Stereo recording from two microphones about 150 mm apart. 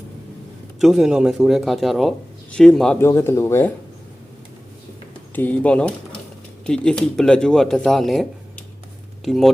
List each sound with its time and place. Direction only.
0.8 s speech: centre (ahead or behind)
3.0 s speech: 15° left (ahead or behind)
5.3 s speech: 10° left (ahead or behind)